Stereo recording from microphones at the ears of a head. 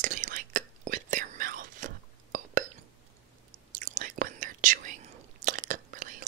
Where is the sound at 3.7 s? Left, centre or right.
Right.